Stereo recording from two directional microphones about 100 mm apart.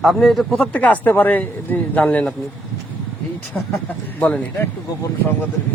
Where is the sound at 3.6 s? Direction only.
20° left (ahead or behind).